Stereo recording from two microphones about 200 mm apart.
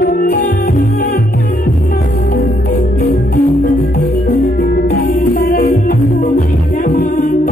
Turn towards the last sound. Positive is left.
turn(degrees=40)  # may be behind; listen again after turning